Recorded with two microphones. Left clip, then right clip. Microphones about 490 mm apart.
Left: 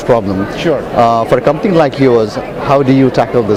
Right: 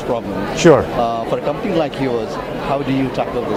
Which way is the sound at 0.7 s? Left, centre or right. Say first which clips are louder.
Right 4 dB; right.